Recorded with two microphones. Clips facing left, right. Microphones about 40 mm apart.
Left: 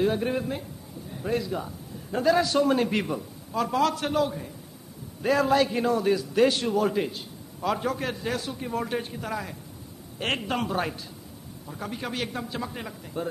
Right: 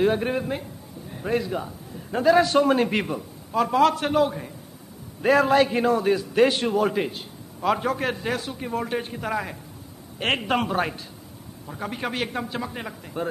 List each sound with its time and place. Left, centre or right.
0.0 s a man's voice: right
9.1 s a man's voice: right